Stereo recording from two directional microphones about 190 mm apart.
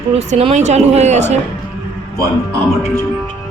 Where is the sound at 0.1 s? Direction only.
35° right (ahead or behind).